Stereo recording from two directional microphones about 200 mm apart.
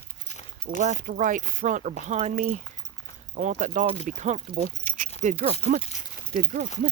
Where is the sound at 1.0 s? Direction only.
40° right (ahead or behind).